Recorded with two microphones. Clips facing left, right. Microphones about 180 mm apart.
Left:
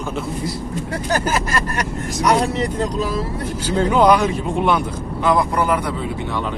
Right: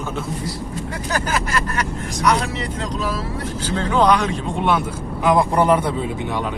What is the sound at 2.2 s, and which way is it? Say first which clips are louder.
Speech: left 3 dB; 45° left (ahead or behind).